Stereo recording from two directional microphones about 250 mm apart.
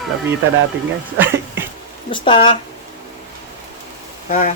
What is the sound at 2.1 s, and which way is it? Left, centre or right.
Speech, centre.